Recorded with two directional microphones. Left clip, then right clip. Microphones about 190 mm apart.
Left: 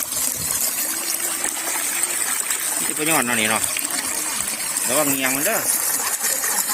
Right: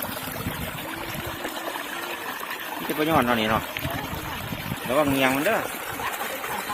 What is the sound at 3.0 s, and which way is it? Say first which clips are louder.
Speech: left 1 dB; centre (ahead or behind).